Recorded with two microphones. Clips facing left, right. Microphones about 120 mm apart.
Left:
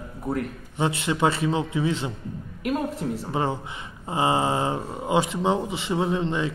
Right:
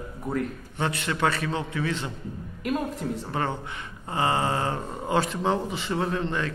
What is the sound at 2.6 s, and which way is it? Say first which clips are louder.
Speech: left 2 dB; centre (ahead or behind).